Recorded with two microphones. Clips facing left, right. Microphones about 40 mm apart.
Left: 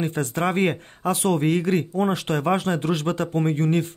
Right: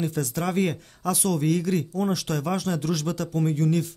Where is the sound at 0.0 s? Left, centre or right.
Left.